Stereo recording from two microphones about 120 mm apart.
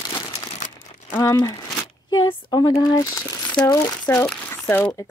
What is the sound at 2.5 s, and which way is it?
Speech, 30° left (ahead or behind).